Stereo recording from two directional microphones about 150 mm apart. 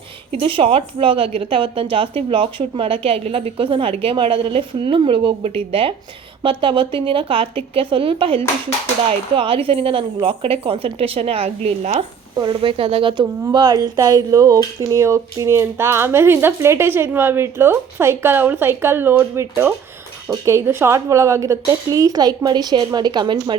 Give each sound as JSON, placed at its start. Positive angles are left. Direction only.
{"t": 0.3, "sound": "a woman's voice", "side_deg": -40}